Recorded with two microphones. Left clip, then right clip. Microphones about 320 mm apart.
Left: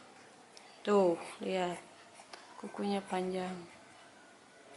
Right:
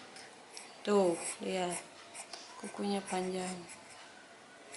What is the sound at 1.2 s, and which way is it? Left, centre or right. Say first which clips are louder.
Speech: left 1 dB; centre.